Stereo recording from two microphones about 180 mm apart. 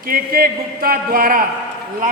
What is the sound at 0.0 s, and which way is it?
Speech, 55° right (ahead or behind).